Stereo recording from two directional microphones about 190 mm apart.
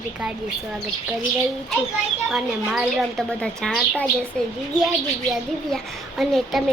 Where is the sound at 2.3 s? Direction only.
Centre (ahead or behind).